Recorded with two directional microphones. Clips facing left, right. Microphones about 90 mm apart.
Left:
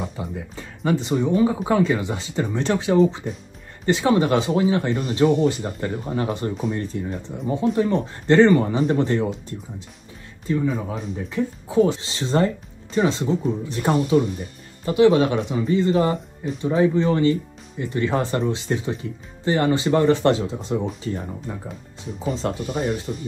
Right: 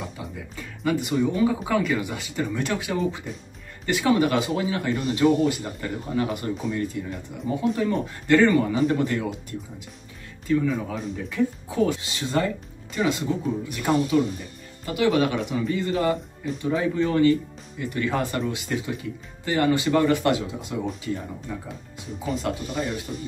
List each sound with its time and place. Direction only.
0.6 s speech: 25° left (ahead or behind)
23.1 s speech: 10° left (ahead or behind)